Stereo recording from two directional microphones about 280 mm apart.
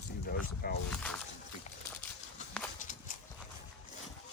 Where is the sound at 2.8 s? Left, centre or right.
Left.